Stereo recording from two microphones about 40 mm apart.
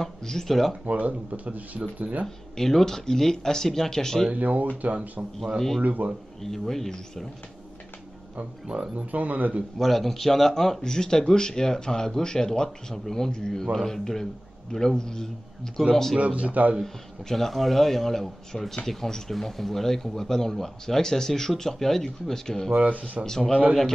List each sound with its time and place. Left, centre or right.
0.0 s speech: centre
0.8 s speech: right
2.2 s speech: centre
4.3 s speech: right
6.4 s speech: centre
8.4 s speech: right
8.9 s speech: right
9.8 s speech: centre
16.2 s speech: right
16.8 s speech: centre
22.7 s speech: right
23.2 s speech: centre